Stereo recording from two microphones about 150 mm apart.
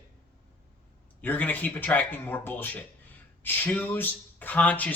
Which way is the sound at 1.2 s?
10° left (ahead or behind).